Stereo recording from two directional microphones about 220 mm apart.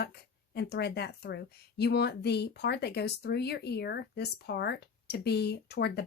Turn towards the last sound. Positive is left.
turn(degrees=50)  # may be behind; listen again after turning